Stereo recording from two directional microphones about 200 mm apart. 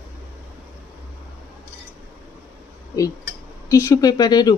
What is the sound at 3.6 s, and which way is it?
Speech, 15° left (ahead or behind).